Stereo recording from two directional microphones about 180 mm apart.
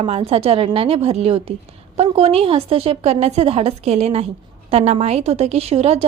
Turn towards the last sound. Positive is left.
turn(degrees=-35)  # may be behind; listen again after turning